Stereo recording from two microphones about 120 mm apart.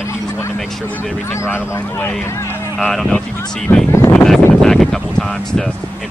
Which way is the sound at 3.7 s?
15° left (ahead or behind).